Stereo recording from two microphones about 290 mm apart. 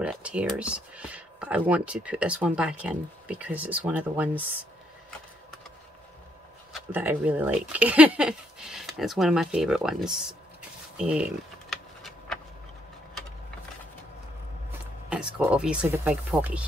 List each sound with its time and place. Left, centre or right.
0.0 s speech: centre
6.7 s speech: centre
11.7 s a sound: centre
15.0 s speech: centre